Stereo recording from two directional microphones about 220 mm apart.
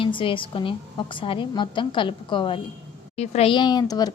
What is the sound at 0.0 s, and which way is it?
A woman's voice, 25° left (ahead or behind).